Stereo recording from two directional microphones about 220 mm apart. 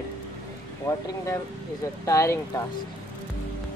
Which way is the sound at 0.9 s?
15° left (ahead or behind).